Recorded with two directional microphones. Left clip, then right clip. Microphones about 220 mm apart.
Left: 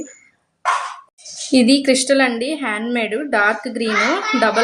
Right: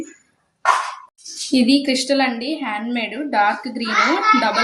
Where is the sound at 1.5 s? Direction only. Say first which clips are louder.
Left 3 dB; 50° left (ahead or behind).